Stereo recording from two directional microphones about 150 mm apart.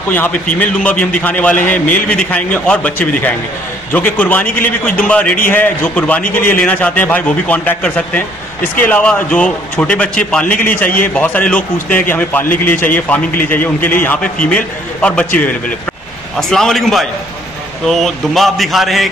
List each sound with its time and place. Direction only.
0.1 s a man's voice: 10° left (ahead or behind)
3.9 s a man's voice: 10° left (ahead or behind)
10.4 s a man's voice: 65° left (ahead or behind)
11.1 s a man's voice: 10° left (ahead or behind)